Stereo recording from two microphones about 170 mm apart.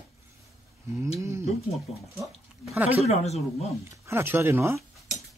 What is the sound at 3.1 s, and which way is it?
Speech, 40° left (ahead or behind).